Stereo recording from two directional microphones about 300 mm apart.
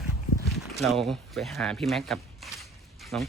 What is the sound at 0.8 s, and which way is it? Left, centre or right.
Speech, centre.